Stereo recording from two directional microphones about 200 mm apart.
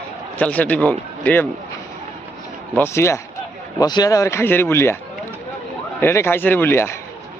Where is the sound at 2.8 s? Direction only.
15° left (ahead or behind).